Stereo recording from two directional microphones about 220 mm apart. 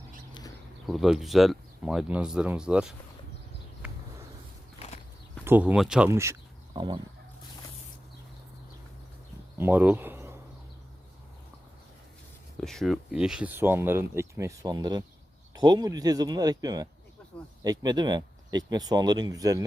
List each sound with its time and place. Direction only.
0.9 s speech: centre (ahead or behind)
3.8 s a sound: 5° right (ahead or behind)
5.5 s speech: 5° right (ahead or behind)
6.7 s speech: 20° right (ahead or behind)
9.6 s speech: 10° right (ahead or behind)
12.5 s speech: centre (ahead or behind); by 19.6 s 15° right (ahead or behind)